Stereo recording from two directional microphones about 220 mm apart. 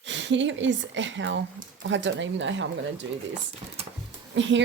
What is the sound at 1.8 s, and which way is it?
Speech, 55° right (ahead or behind).